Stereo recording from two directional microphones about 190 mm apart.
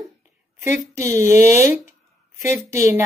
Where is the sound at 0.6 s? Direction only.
15° right (ahead or behind).